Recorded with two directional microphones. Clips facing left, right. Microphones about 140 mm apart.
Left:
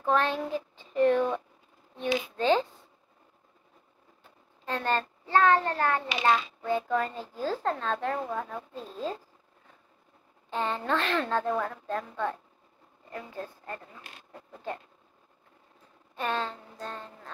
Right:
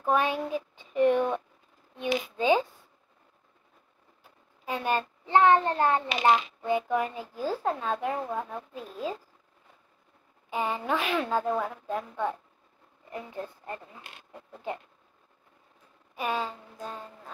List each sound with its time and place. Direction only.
0.0 s speech: 10° right (ahead or behind)
4.2 s a child's voice: 10° right (ahead or behind)
10.5 s a woman's voice: 10° right (ahead or behind)
16.2 s a woman's voice: 10° right (ahead or behind)